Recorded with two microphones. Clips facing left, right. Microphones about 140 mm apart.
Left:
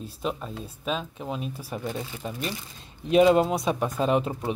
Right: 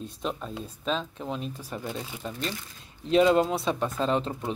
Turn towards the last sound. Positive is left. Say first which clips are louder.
# left 3 dB
turn(degrees=10)  # may be behind; listen again after turning